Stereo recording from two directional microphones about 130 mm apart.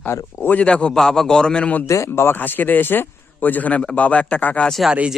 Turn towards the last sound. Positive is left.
turn(degrees=-5)  # may be behind; listen again after turning